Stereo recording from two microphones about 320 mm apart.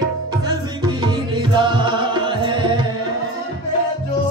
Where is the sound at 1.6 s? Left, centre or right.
Centre.